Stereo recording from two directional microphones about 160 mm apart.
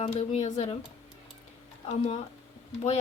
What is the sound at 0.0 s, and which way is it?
Speech, 45° left (ahead or behind).